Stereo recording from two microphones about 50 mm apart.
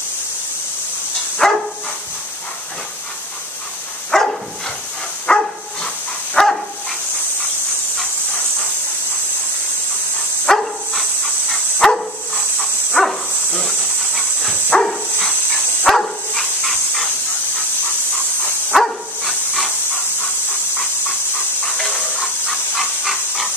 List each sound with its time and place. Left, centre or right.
1.4 s dog: centre
4.1 s dog: centre
10.4 s dog: centre
13.5 s hiss: left
14.7 s dog: centre
18.7 s dog: centre
21.6 s a sound: centre